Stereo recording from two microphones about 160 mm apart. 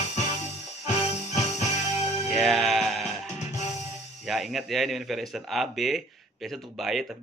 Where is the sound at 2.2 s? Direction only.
Centre (ahead or behind).